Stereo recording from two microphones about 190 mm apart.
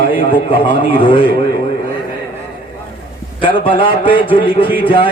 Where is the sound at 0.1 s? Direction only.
25° left (ahead or behind).